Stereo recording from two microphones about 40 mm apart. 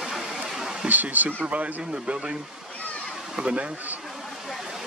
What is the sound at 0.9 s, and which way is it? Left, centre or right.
Speech, right.